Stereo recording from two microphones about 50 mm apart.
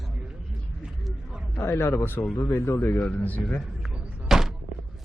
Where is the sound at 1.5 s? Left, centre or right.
Left.